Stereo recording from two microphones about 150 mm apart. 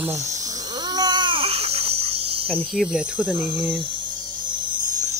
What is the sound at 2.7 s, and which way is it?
Speech, 5° right (ahead or behind).